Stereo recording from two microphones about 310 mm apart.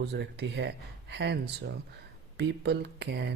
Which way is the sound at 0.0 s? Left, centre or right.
Right.